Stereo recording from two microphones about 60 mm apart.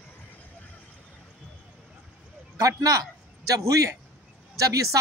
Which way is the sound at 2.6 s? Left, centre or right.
Right.